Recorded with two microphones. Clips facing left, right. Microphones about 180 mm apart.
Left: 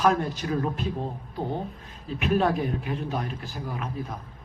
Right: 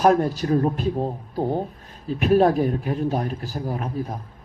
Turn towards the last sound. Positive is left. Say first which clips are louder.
# right 5 dB
turn(degrees=-40)  # may be behind; listen again after turning